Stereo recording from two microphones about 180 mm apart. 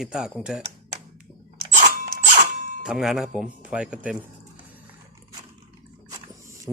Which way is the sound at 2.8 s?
Centre (ahead or behind).